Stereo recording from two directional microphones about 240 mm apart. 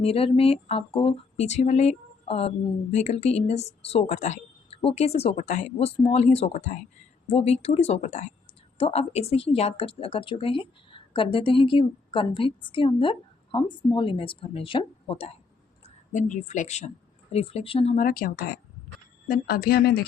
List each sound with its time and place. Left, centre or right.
0.0 s speech: left